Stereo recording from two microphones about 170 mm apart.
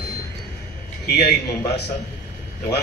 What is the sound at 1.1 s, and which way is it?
Speech, 75° left (ahead or behind).